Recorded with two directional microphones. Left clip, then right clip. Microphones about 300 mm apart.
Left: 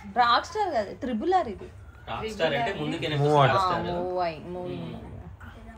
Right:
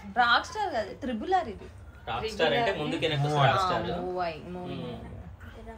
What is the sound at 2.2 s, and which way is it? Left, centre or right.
Speech, right.